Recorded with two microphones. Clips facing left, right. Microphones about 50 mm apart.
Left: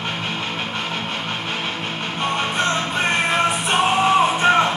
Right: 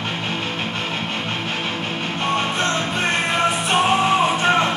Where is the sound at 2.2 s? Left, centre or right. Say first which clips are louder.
Even; centre.